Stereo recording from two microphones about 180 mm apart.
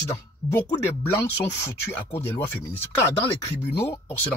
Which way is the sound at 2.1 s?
10° left (ahead or behind).